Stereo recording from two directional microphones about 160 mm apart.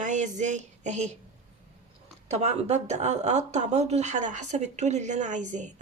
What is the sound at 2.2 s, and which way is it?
Speech, 45° right (ahead or behind).